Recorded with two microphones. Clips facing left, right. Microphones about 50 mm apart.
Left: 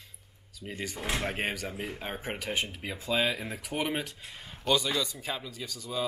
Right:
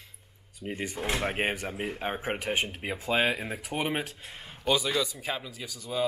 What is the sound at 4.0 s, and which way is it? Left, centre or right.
Speech, right.